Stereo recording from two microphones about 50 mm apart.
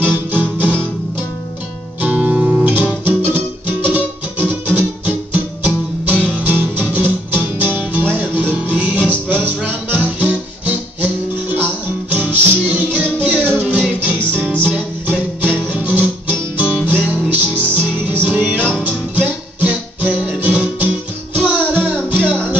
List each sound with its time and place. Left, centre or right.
0.0 s guitar: right
2.0 s music: right
2.5 s guitar: right
3.1 s music: right